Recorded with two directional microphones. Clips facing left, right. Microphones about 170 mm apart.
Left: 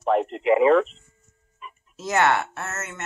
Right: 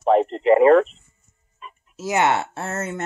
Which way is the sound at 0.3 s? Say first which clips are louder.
Right 3 dB; 5° left (ahead or behind).